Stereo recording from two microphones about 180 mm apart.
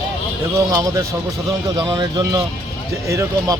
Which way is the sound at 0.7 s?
20° right (ahead or behind).